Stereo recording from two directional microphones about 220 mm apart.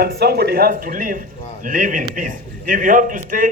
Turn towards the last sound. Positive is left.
turn(degrees=-40)  # may be behind; listen again after turning